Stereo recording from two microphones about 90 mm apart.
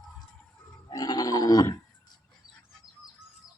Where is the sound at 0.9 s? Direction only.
45° left (ahead or behind).